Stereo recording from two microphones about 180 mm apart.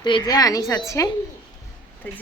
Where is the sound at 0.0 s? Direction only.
25° left (ahead or behind).